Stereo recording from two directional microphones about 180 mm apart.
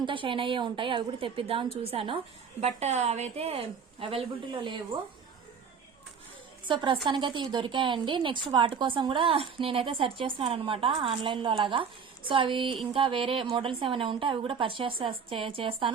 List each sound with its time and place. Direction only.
0.0 s a woman's voice: 30° right (ahead or behind)
6.7 s a woman's voice: 25° right (ahead or behind)